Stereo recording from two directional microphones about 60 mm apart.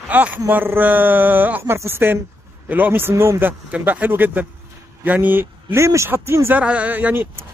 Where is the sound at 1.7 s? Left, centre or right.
Right.